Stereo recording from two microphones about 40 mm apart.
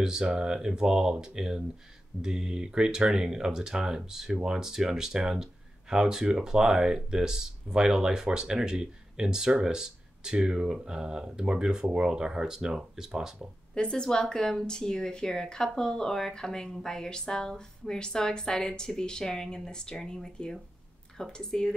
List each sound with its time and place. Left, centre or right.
0.0 s speech: centre
13.7 s speech: left